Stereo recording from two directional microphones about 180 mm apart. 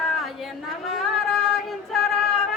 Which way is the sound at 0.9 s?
Centre (ahead or behind).